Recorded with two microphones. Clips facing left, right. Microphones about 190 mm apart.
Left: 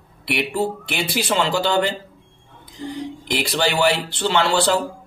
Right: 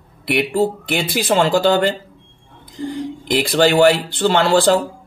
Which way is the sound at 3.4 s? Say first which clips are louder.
Right 7 dB; 50° right (ahead or behind).